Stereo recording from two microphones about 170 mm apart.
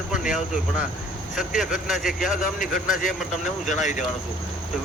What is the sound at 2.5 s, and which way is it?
Speech, 55° left (ahead or behind).